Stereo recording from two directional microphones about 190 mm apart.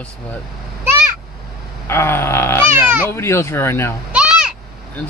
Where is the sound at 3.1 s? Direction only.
15° left (ahead or behind).